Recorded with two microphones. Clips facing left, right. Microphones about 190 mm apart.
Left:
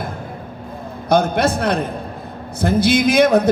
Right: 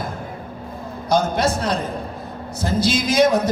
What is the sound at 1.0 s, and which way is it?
A man's voice, 60° left (ahead or behind).